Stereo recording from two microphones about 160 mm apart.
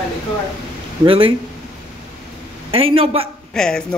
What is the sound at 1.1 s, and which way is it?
Speech, 35° right (ahead or behind).